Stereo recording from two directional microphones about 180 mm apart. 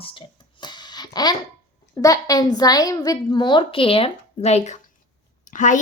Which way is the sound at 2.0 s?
20° left (ahead or behind).